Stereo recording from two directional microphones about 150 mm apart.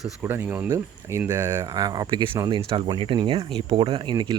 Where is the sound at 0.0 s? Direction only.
10° right (ahead or behind).